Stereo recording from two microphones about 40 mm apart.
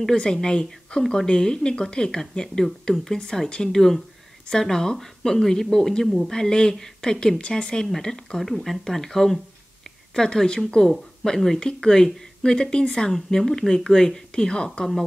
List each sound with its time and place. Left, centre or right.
0.2 s speech: left
6.3 s speech: centre
8.4 s speech: centre; by 13.1 s left
13.1 s speech: centre